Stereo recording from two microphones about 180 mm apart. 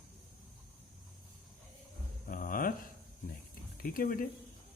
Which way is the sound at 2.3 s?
50° left (ahead or behind).